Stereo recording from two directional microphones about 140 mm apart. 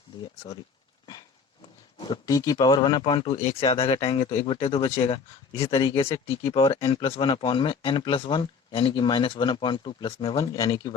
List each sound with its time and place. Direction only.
0.2 s speech: 30° left (ahead or behind)
2.0 s speech: 25° left (ahead or behind)
10.3 s speech: 25° left (ahead or behind)